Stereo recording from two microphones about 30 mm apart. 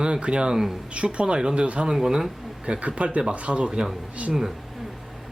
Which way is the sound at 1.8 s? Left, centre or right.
Right.